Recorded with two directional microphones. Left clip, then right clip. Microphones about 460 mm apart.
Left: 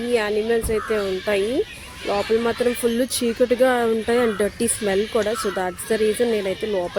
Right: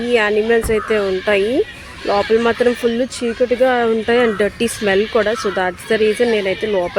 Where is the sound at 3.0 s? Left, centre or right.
Left.